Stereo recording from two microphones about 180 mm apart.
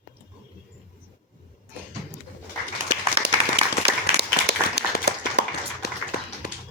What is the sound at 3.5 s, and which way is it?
Applause, 65° right (ahead or behind).